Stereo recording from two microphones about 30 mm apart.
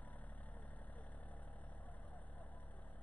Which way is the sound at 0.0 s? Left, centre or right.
Left.